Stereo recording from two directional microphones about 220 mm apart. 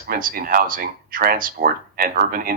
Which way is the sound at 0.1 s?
40° right (ahead or behind).